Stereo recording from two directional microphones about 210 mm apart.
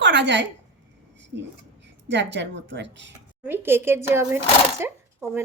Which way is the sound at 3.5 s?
10° right (ahead or behind).